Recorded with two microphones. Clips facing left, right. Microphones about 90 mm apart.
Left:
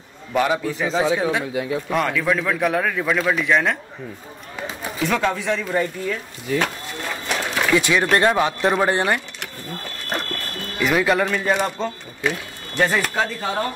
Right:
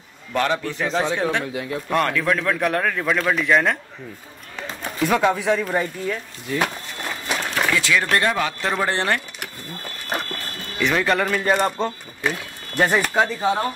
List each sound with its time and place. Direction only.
0.3 s a man's voice: 10° left (ahead or behind)
4.6 s a sound: 5° left (ahead or behind)
5.0 s speech: 5° right (ahead or behind)
7.2 s run: 5° right (ahead or behind)
7.7 s speech: 20° left (ahead or behind)
10.8 s speech: 5° left (ahead or behind); by 13.7 s 10° right (ahead or behind)